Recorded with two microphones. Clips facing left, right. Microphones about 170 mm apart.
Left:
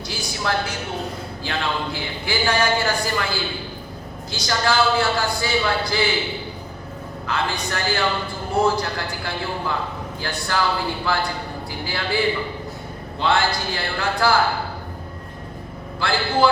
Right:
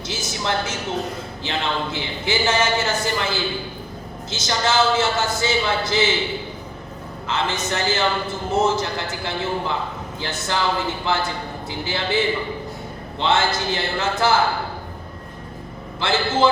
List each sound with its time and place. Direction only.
0.1 s a woman's voice: 20° right (ahead or behind)
7.3 s a man's voice: 20° right (ahead or behind)
16.0 s a man's voice: 20° right (ahead or behind)